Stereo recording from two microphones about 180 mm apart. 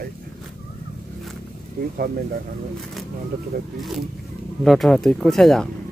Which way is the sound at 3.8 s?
Centre (ahead or behind).